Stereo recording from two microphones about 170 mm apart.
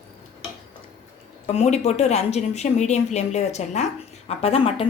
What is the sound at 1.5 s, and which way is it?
Speech, 40° left (ahead or behind).